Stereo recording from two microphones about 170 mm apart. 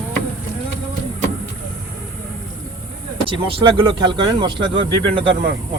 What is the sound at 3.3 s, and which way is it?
Speech, 30° right (ahead or behind).